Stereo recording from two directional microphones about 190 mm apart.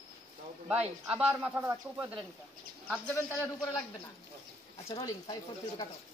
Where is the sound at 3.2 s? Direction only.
15° left (ahead or behind).